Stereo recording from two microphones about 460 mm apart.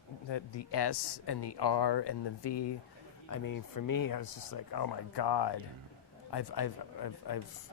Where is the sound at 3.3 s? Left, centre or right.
Left.